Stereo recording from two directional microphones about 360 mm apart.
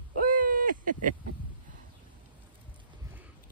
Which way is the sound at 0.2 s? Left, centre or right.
Right.